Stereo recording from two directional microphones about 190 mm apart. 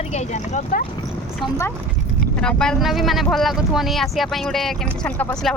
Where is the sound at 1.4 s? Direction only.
15° left (ahead or behind).